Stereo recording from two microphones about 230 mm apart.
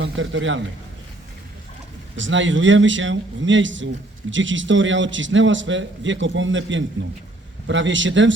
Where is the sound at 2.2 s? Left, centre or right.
Right.